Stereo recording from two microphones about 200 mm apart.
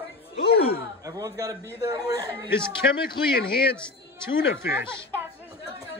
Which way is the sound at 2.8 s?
55° left (ahead or behind).